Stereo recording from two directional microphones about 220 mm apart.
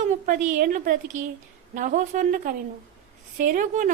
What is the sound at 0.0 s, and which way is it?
A woman's voice, 35° right (ahead or behind).